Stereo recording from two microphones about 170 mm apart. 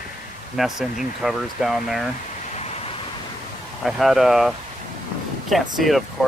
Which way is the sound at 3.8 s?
Centre (ahead or behind).